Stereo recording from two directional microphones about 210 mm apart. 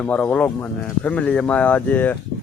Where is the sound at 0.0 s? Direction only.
5° left (ahead or behind).